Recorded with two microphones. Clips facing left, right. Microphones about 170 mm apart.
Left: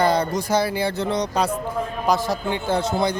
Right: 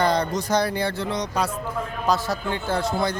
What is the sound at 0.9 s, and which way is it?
Speech, 25° left (ahead or behind).